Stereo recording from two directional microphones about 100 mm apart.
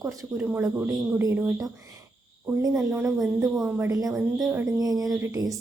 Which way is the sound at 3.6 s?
25° right (ahead or behind).